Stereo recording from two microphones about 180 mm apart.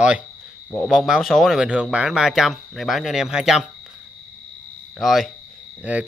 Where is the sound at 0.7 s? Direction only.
5° left (ahead or behind).